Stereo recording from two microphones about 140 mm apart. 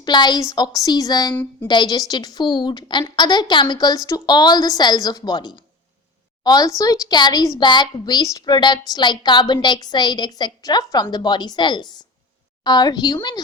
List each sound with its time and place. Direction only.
0.0 s a woman's voice: 30° left (ahead or behind)